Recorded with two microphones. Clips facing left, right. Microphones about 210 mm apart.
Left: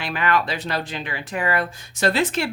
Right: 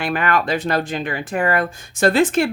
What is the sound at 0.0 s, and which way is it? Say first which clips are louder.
Speech: right 3 dB; 50° right (ahead or behind).